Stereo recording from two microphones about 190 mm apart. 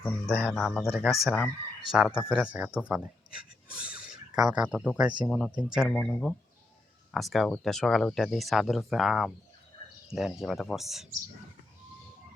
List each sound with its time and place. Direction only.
0.0 s speech: 5° left (ahead or behind)
2.6 s speech: 10° left (ahead or behind)
2.9 s speech: 5° right (ahead or behind)